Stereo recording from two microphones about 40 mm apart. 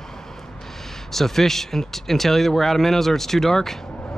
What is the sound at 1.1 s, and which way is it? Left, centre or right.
Speech, centre.